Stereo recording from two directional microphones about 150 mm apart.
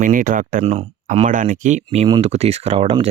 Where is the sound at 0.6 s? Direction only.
45° right (ahead or behind).